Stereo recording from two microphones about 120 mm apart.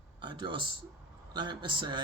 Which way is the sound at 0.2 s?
40° right (ahead or behind).